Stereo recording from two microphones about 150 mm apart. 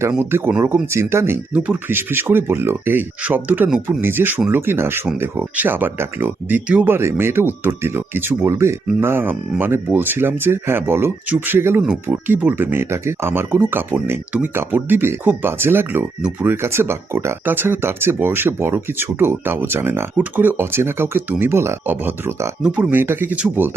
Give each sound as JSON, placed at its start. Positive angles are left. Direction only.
{"t": 0.2, "sound": "speech", "side_deg": -15}